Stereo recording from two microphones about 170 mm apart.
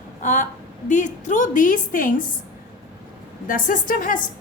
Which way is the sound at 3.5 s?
55° left (ahead or behind).